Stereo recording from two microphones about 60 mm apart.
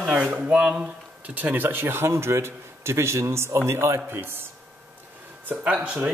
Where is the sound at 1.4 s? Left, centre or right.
Right.